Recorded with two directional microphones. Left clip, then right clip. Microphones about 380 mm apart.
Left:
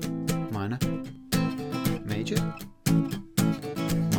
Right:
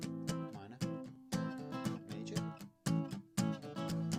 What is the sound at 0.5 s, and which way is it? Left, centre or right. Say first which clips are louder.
Music: left 19 dB; left.